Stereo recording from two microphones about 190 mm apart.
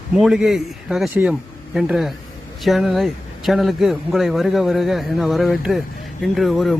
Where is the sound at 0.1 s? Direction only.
5° right (ahead or behind).